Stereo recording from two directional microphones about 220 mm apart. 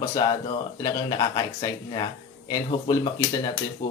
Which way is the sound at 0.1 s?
20° left (ahead or behind).